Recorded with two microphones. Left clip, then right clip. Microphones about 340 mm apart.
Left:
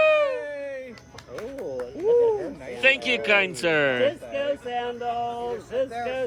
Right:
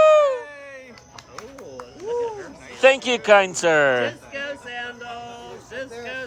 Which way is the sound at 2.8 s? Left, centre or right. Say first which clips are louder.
Right 4 dB; centre.